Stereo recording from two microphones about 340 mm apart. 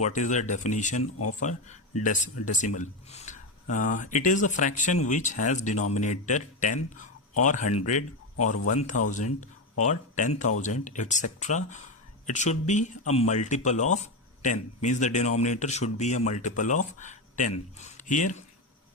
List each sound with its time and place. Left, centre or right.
0.0 s speech: left
1.0 s speech: left
1.4 s speech: left